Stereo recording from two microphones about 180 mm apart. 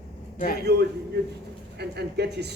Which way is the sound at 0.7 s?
65° right (ahead or behind).